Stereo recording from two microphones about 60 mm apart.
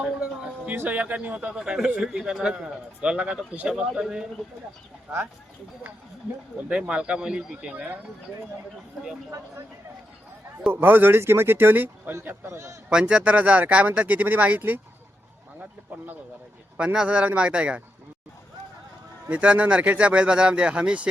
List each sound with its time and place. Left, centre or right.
0.0 s a sound: centre
0.8 s speech: right
1.5 s speech: centre
6.7 s speech: centre
10.7 s speech: right
12.5 s a man's voice: right
12.9 s speech: centre
16.7 s speech: centre
19.3 s speech: right